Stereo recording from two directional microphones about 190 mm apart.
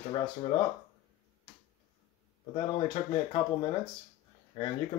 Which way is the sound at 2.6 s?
25° left (ahead or behind).